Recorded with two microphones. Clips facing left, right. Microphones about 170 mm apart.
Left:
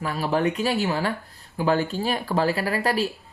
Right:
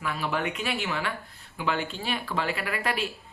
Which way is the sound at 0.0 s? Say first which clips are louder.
Left 6 dB; 35° left (ahead or behind).